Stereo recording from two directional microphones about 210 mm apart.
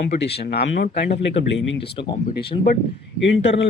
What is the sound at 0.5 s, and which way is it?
A man's voice, 50° left (ahead or behind).